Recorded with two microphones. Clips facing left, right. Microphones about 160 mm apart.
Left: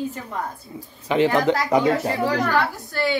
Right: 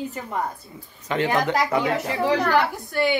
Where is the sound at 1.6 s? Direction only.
15° left (ahead or behind).